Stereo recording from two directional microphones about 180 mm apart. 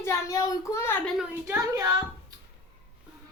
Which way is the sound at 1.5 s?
15° right (ahead or behind).